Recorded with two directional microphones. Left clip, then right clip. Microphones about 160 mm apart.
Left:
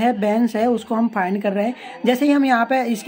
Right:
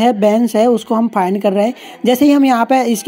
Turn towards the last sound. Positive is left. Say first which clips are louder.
# right 5 dB
turn(degrees=-40)  # may be behind; listen again after turning